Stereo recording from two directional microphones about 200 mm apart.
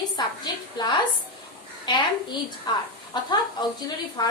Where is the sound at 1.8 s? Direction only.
20° left (ahead or behind).